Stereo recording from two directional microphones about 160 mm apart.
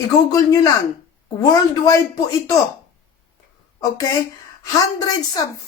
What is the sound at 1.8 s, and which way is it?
Speech, 20° left (ahead or behind).